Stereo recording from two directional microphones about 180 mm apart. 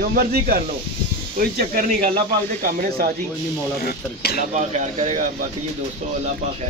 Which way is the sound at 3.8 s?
60° left (ahead or behind).